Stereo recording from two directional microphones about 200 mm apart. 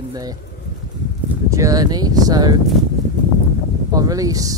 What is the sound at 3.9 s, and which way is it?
Speech, 15° right (ahead or behind).